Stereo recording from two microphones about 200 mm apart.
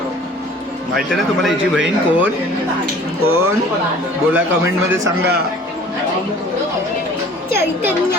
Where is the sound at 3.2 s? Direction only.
90° right.